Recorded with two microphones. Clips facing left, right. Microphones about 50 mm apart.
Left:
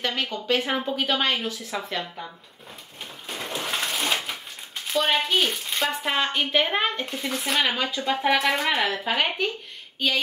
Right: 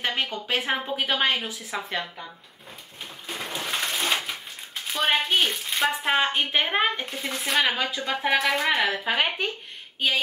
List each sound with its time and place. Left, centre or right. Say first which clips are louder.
0.0 s speech: even; centre
3.3 s a sound: left 1 dB; centre
4.8 s speech: left 1 dB; centre